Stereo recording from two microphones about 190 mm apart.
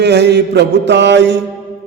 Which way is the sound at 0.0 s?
60° right (ahead or behind).